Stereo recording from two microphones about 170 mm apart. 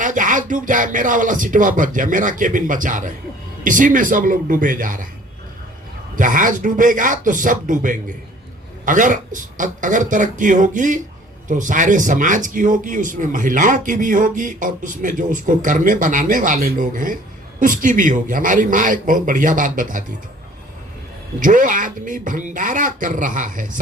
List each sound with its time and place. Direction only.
0.0 s a man's voice: 50° right (ahead or behind)
6.1 s a man's voice: 50° right (ahead or behind)
21.3 s a man's voice: 50° right (ahead or behind)